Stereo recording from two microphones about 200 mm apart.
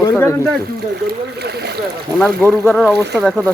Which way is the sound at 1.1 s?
55° right (ahead or behind).